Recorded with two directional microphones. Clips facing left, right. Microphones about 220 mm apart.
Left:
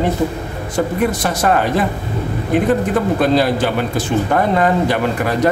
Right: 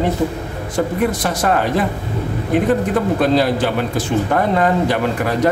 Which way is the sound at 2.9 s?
5° left (ahead or behind).